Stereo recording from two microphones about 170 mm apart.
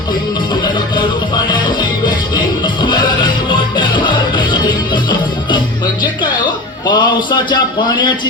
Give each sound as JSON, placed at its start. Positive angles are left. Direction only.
{"t": 3.5, "sound": "music", "side_deg": 25}
{"t": 6.8, "sound": "a man's voice", "side_deg": 25}